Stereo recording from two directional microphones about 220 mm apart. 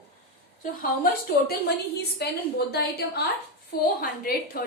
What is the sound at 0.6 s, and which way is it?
Speech, 40° left (ahead or behind).